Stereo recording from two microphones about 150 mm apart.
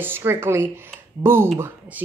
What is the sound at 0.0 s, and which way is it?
A child's voice, 15° right (ahead or behind).